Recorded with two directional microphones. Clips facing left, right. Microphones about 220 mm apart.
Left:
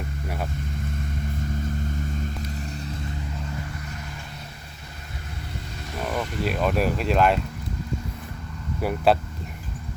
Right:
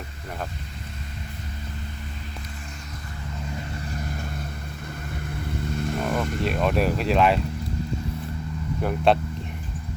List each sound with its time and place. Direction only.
5.7 s vehicle: 55° right (ahead or behind)
6.0 s vehicle: centre (ahead or behind)
6.4 s speech: centre (ahead or behind)
8.8 s speech: 5° left (ahead or behind)